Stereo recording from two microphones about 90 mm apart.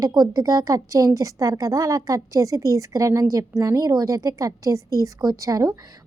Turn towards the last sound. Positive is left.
turn(degrees=-40)  # may be behind; listen again after turning